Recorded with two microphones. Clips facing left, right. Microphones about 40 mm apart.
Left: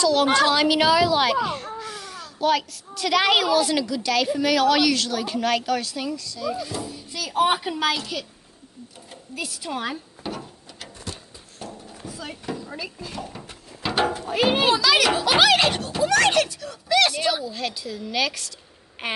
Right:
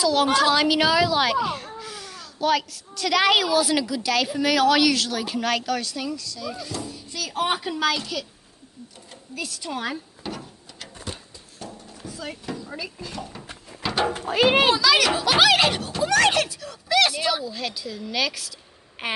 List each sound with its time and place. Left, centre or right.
0.0 s a child's voice: centre
9.3 s drawer open or close: centre
11.6 s a sound: centre
12.2 s a sound: centre
12.5 s speech: centre
14.4 s a child's voice: right
14.7 s a child's voice: centre